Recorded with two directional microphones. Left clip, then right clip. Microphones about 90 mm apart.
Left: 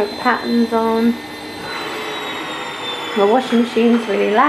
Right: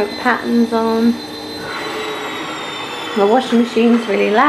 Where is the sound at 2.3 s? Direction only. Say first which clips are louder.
Right 1 dB; 25° right (ahead or behind).